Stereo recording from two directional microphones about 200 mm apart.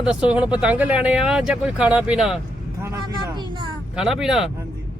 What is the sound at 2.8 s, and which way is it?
Speech, 15° right (ahead or behind).